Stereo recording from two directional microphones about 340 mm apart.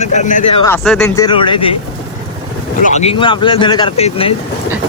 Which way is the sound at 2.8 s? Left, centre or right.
Centre.